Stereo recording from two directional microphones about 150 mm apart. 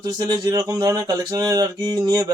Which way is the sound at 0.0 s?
25° right (ahead or behind).